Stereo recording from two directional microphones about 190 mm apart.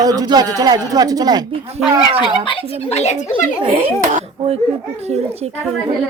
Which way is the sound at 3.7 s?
30° right (ahead or behind).